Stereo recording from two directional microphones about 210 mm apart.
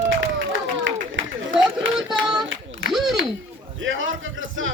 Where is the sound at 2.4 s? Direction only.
65° right (ahead or behind).